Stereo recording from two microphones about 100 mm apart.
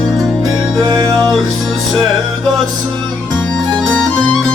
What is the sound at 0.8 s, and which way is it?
Music, 35° right (ahead or behind).